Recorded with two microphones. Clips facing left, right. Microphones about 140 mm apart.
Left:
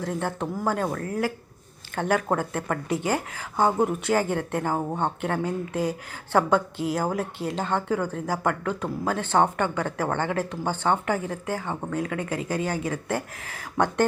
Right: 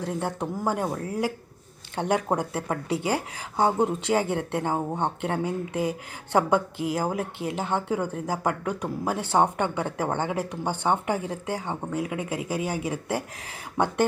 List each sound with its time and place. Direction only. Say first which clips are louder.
0.0 s speech: left 1 dB; 15° right (ahead or behind)